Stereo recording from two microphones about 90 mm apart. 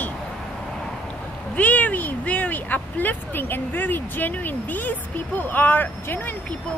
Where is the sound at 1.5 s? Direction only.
15° left (ahead or behind).